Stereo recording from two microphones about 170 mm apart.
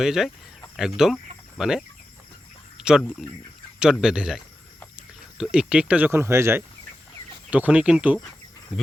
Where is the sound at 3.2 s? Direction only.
5° right (ahead or behind).